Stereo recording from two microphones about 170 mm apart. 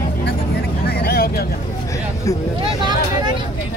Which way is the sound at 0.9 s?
65° left (ahead or behind).